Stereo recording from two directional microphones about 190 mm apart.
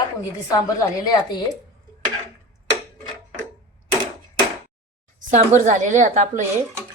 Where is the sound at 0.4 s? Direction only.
20° left (ahead or behind).